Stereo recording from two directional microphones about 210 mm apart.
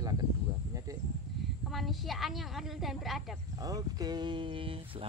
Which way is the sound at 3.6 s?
15° right (ahead or behind).